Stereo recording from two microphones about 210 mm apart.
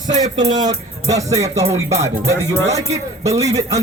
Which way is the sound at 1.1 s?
15° right (ahead or behind).